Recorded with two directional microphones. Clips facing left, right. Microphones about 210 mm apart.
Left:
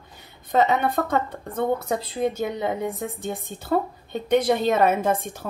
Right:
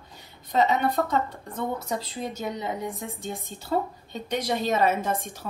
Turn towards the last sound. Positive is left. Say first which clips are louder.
# left 5 dB
turn(degrees=55)  # may be behind; listen again after turning